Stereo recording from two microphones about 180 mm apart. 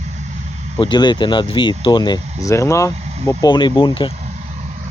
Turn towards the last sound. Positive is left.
turn(degrees=25)  # may be behind; listen again after turning